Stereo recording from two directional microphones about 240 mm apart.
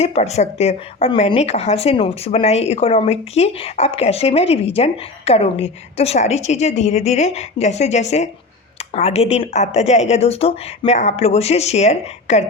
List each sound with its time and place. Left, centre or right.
0.0 s speech: left